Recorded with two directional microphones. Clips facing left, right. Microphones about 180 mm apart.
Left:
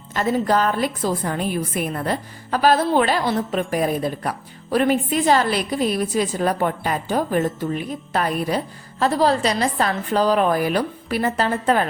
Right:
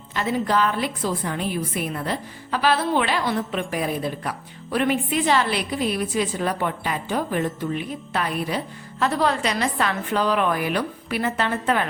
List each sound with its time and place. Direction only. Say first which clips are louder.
0.1 s a woman's voice: left 3 dB; 45° left (ahead or behind)